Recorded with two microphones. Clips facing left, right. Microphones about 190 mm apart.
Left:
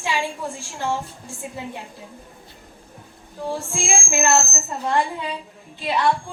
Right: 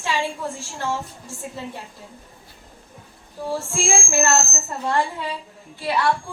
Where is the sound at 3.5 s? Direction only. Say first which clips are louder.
Right 2 dB; 15° left (ahead or behind).